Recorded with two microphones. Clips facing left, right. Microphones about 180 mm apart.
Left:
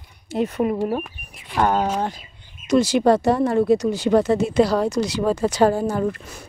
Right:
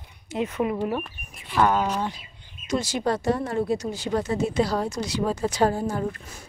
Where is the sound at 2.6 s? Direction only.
75° left (ahead or behind).